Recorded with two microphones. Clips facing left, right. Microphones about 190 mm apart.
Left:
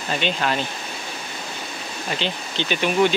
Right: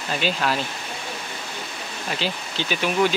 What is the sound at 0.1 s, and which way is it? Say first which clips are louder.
Speech: left 1 dB; centre (ahead or behind).